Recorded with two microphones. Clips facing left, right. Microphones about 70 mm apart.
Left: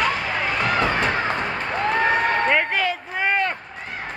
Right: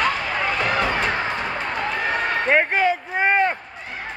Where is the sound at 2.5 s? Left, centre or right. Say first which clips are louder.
Right 3 dB; right.